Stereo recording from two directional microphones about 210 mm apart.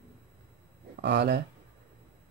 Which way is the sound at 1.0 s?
55° right (ahead or behind).